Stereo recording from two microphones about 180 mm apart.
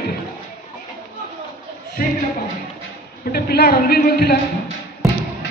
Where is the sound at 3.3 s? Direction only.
60° left (ahead or behind).